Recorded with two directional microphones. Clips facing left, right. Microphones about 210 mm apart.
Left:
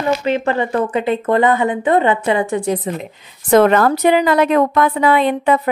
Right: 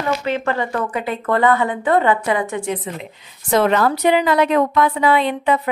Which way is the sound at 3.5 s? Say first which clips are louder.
Left 5 dB; 50° left (ahead or behind).